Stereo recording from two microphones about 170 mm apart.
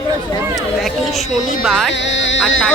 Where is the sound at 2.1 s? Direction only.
90° left.